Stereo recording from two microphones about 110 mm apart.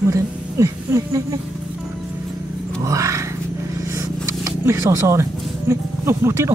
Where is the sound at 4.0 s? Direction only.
30° right (ahead or behind).